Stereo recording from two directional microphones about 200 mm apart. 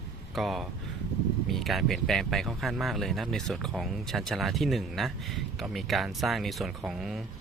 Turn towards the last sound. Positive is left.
turn(degrees=0)  # may be behind; listen again after turning